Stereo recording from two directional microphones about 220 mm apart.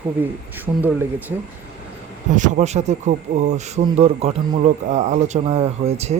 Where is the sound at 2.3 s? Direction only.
35° right (ahead or behind).